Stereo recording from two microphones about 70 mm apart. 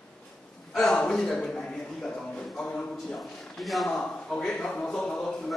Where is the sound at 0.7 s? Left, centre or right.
Centre.